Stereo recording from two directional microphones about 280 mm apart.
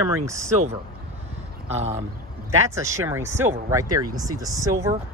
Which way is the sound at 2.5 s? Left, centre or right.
Centre.